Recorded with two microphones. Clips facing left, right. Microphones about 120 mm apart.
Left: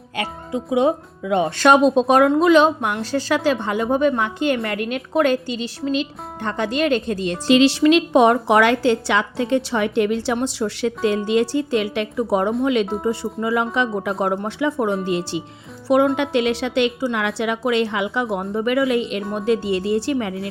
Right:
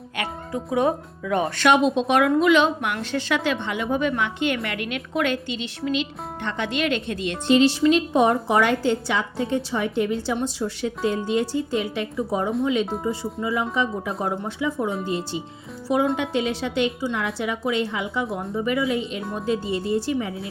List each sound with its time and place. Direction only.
0.2 s speech: 20° left (ahead or behind)
1.5 s a woman's voice: 35° left (ahead or behind)
7.4 s a woman's voice: 85° left; by 20.5 s 70° left (ahead or behind)